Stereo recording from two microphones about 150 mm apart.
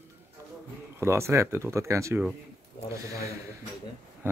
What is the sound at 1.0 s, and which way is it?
Speech, 20° right (ahead or behind).